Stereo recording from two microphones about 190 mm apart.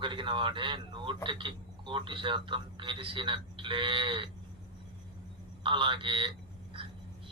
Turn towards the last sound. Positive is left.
turn(degrees=-25)  # may be behind; listen again after turning